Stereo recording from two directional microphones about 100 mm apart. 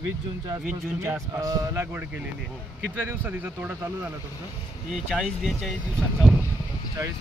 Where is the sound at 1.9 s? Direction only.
20° right (ahead or behind).